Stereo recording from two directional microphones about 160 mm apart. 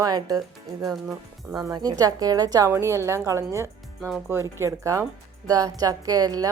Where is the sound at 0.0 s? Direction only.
20° right (ahead or behind).